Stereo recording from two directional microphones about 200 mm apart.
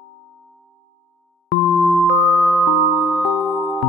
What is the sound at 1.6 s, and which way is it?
Music, centre (ahead or behind).